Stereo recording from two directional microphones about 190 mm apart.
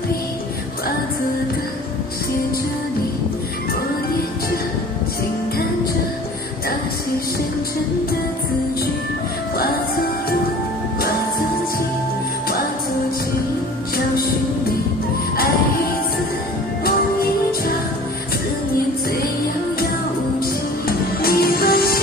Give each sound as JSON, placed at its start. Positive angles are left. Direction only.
{"t": 16.8, "sound": "music", "side_deg": 50}
{"t": 21.2, "sound": "music", "side_deg": 50}